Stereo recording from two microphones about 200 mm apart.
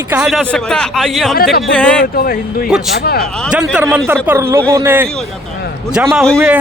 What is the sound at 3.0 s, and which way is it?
Speech, 50° left (ahead or behind).